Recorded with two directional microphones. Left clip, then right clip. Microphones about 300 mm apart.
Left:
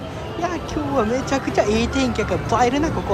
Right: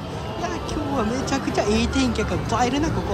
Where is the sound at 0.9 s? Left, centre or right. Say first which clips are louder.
Left 5 dB; centre.